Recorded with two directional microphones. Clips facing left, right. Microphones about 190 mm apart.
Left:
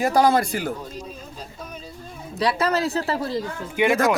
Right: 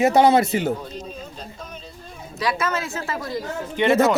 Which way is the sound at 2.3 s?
35° left (ahead or behind).